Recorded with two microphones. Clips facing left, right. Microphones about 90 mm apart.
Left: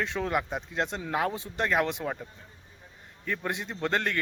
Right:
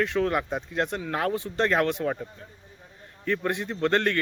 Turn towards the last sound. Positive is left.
turn(degrees=10)  # may be behind; listen again after turning